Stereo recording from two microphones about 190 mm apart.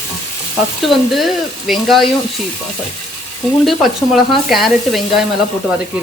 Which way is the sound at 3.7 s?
Centre (ahead or behind).